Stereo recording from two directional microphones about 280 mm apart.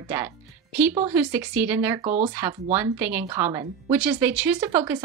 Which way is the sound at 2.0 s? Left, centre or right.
Right.